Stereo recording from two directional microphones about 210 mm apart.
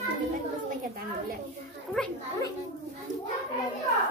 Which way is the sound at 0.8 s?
45° right (ahead or behind).